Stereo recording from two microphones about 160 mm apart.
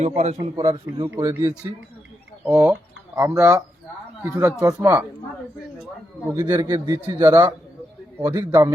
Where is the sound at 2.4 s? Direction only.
10° right (ahead or behind).